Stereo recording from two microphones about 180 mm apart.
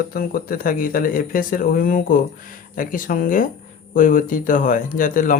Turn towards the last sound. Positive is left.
turn(degrees=45)  # may be behind; listen again after turning